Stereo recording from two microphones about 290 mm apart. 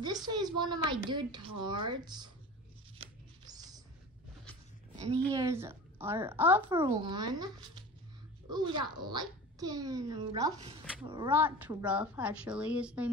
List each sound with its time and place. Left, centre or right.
0.0 s a child's voice: centre
3.0 s a sound: centre
4.9 s a woman's voice: right
5.3 s a child's voice: centre